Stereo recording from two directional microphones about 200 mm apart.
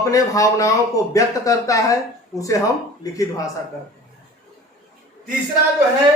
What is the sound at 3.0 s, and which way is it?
Speech, 15° left (ahead or behind).